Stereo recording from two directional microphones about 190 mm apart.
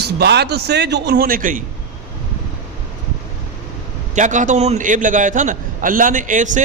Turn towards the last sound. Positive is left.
turn(degrees=-40)  # may be behind; listen again after turning